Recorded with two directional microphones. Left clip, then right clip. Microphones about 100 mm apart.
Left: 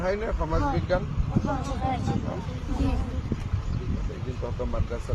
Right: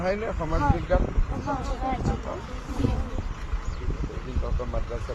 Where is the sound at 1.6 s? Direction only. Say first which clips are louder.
Even; centre (ahead or behind).